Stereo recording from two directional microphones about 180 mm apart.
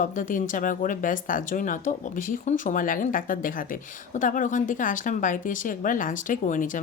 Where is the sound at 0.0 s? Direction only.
45° left (ahead or behind).